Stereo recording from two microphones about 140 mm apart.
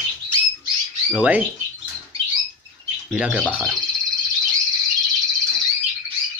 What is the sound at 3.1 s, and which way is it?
Speech, 5° right (ahead or behind).